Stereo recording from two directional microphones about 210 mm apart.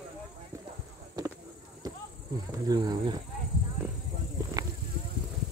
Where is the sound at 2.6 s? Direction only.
20° right (ahead or behind).